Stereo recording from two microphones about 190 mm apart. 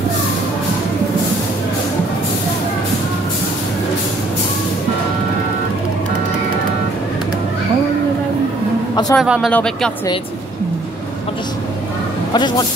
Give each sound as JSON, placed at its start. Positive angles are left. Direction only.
{"t": 9.1, "sound": "speech", "side_deg": 0}
{"t": 12.4, "sound": "speech", "side_deg": 25}